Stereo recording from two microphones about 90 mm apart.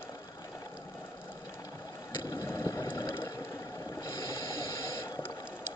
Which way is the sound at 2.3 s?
30° left (ahead or behind).